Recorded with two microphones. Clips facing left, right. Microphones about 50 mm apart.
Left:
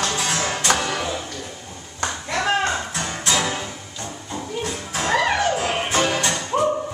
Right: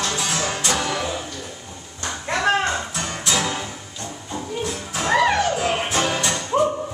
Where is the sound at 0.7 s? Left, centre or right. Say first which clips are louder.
Right 1 dB; centre.